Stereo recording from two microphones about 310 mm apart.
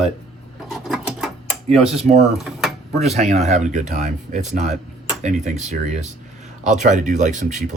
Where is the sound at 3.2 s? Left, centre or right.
Right.